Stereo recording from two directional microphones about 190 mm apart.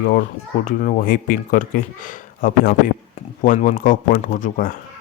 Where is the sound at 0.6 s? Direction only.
45° left (ahead or behind).